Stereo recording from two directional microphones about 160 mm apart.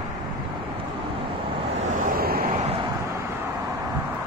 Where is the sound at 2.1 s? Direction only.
70° right (ahead or behind).